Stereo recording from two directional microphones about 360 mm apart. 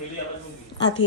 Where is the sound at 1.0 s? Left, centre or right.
Left.